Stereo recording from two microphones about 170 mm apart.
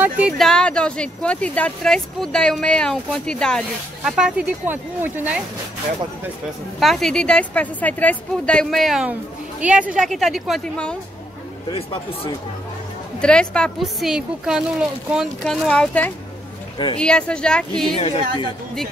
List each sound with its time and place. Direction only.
0.2 s speech: centre (ahead or behind)
6.8 s speech: centre (ahead or behind)
11.7 s speech: 30° left (ahead or behind)
13.2 s speech: 5° left (ahead or behind)
16.7 s speech: 25° left (ahead or behind)
17.0 s speech: 5° left (ahead or behind)
17.9 s speech: 35° left (ahead or behind)